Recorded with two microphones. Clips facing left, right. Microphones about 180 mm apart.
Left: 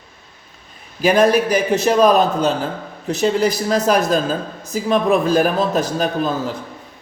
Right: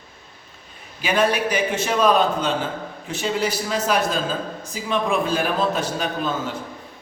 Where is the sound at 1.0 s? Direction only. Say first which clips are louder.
Left 7 dB; 40° left (ahead or behind).